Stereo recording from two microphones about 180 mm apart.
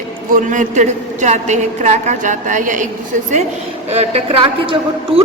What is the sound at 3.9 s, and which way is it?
A man's voice, 35° right (ahead or behind).